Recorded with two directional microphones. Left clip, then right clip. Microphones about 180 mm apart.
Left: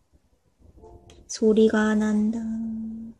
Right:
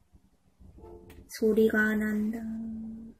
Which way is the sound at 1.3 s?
40° left (ahead or behind).